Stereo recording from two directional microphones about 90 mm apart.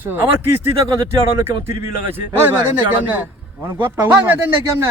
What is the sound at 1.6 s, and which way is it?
A man's voice, 25° right (ahead or behind).